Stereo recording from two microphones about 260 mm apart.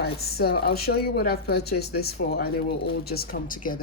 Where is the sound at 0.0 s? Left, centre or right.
Left.